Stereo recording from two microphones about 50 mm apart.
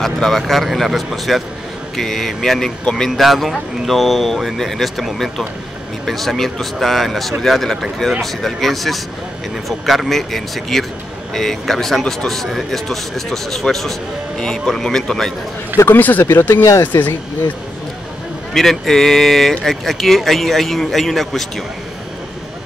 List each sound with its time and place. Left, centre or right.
0.0 s speech: centre
12.0 s a man's voice: centre
12.3 s a man's voice: centre
15.9 s speech: left
16.3 s speech: left
16.8 s speech: left
18.5 s speech: centre